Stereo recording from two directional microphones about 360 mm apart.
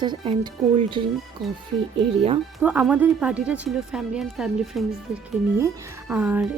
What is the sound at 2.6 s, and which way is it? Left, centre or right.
Speech, centre.